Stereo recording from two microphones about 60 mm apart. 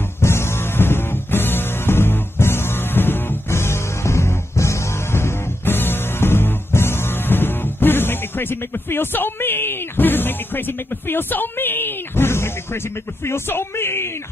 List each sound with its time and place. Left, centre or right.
0.2 s music: left